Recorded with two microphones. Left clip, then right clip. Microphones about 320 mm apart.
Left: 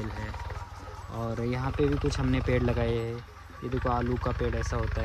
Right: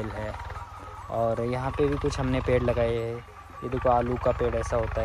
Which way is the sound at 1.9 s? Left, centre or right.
Centre.